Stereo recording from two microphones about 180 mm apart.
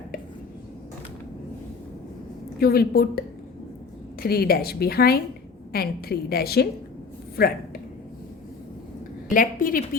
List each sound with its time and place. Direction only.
2.6 s a woman's voice: 55° left (ahead or behind)
9.3 s a woman's voice: 50° left (ahead or behind)